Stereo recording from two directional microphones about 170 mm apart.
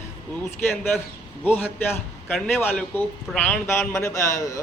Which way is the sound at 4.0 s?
20° left (ahead or behind).